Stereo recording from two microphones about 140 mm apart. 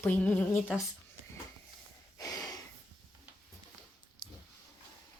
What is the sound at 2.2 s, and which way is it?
Breathing, 25° left (ahead or behind).